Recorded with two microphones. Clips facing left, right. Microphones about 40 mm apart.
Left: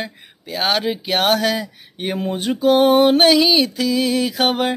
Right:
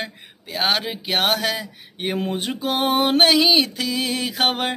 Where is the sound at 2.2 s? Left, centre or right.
Centre.